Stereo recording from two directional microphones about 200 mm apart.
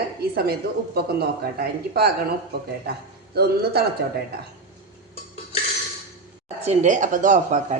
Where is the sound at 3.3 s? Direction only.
55° right (ahead or behind).